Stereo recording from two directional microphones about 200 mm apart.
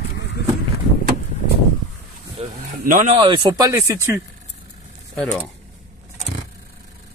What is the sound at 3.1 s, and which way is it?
Speech, 25° right (ahead or behind).